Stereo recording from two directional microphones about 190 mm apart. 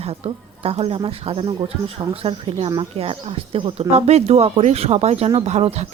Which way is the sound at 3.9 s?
35° right (ahead or behind).